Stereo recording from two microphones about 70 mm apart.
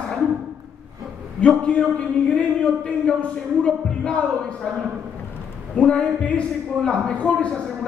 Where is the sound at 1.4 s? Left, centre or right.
Centre.